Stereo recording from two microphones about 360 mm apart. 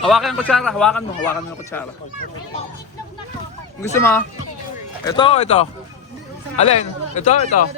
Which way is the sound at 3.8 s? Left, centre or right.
Centre.